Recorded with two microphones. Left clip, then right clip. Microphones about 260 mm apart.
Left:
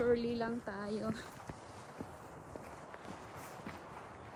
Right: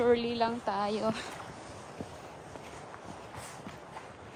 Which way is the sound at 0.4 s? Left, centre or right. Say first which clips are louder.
Right 10 dB; centre.